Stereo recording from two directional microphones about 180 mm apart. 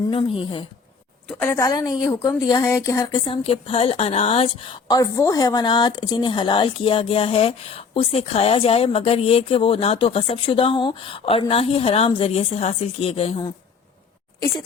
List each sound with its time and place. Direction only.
0.1 s a woman's voice: 30° left (ahead or behind)
1.3 s a woman's voice: 10° left (ahead or behind)
3.2 s speech: 30° left (ahead or behind)
4.9 s speech: 20° left (ahead or behind)